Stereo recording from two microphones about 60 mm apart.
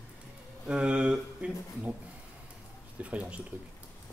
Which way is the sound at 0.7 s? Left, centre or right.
Centre.